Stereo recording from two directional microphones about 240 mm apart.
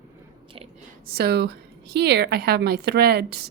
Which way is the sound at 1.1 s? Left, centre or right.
Right.